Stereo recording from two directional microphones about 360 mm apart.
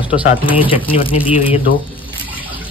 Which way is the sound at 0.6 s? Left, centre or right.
Centre.